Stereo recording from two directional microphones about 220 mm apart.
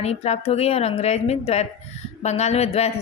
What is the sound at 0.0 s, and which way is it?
A woman's voice, 30° left (ahead or behind).